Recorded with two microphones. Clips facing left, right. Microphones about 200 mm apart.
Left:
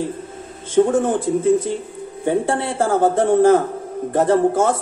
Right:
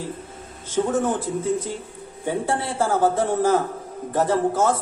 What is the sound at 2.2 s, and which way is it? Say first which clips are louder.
Speech: left 5 dB; 55° left (ahead or behind).